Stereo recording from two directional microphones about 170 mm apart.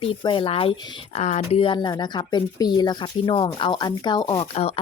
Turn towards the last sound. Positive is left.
turn(degrees=35)  # may be behind; listen again after turning